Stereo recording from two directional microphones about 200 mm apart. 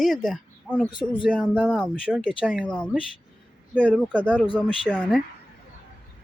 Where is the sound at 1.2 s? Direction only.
5° left (ahead or behind).